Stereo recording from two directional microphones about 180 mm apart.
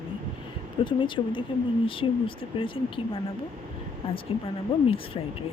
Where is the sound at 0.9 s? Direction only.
25° left (ahead or behind).